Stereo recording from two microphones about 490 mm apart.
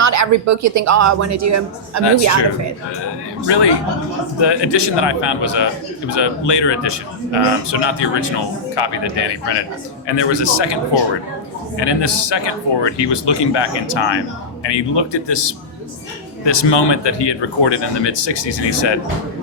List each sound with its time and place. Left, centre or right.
0.0 s speech: right
3.4 s a man's voice: left
11.8 s a man's voice: left